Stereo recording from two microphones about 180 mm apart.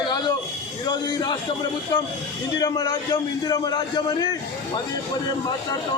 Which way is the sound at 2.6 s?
20° left (ahead or behind).